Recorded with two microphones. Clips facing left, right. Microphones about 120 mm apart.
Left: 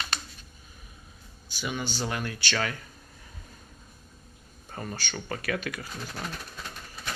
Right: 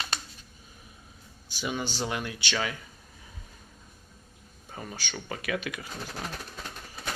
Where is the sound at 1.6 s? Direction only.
25° right (ahead or behind).